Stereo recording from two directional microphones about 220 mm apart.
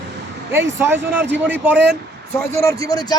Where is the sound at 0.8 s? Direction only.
10° right (ahead or behind).